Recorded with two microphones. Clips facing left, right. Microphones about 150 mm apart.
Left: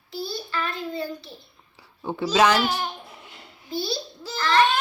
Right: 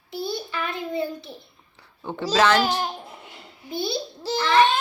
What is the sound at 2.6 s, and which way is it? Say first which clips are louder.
Speech: right 2 dB; 35° right (ahead or behind).